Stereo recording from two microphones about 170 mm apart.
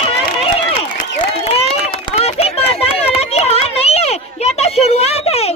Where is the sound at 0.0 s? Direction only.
35° left (ahead or behind).